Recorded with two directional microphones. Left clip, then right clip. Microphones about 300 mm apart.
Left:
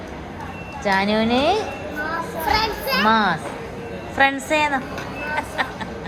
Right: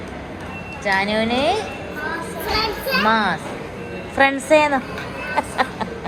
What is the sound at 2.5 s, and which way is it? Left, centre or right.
Children playing, centre.